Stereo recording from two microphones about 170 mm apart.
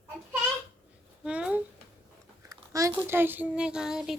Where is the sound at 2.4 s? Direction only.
20° right (ahead or behind).